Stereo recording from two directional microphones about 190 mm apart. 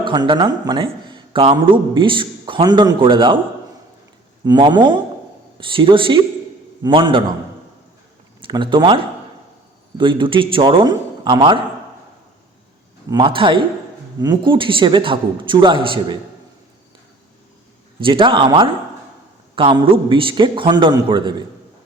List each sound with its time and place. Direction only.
0.0 s a man's voice: 25° right (ahead or behind)
4.4 s a man's voice: 25° right (ahead or behind)
8.4 s a man's voice: 25° right (ahead or behind)
13.1 s a man's voice: 25° right (ahead or behind)
18.0 s a man's voice: 25° right (ahead or behind)